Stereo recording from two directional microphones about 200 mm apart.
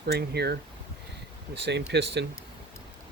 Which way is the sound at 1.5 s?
60° right (ahead or behind).